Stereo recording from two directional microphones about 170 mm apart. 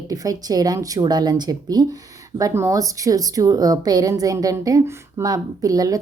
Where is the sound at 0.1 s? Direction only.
20° right (ahead or behind).